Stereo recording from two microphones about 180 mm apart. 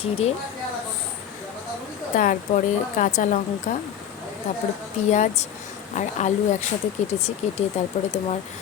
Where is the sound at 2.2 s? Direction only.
45° left (ahead or behind).